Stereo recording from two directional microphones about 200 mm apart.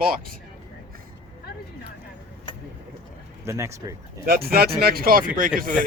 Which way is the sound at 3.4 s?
15° right (ahead or behind).